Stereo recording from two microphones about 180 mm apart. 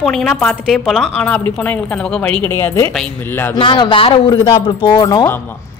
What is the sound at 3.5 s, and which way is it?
Speech, 25° left (ahead or behind).